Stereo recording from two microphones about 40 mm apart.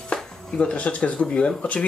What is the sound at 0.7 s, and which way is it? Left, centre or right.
Speech, left.